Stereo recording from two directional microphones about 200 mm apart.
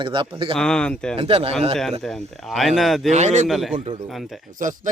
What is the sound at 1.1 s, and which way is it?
Speech, 30° right (ahead or behind).